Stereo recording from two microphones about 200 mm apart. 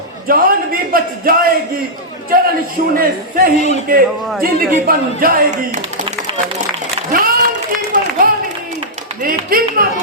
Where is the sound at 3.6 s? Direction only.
35° left (ahead or behind).